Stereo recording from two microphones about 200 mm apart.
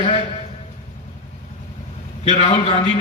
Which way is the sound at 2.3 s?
30° left (ahead or behind).